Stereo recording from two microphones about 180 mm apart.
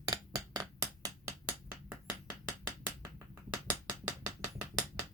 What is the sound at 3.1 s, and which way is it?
Finger snapping, 10° right (ahead or behind).